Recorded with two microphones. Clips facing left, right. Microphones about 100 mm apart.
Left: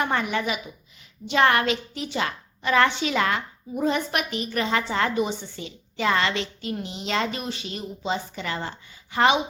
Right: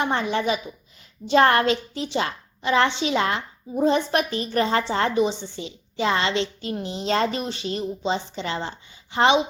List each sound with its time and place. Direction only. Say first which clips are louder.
0.0 s a child's voice: right 2 dB; 25° right (ahead or behind)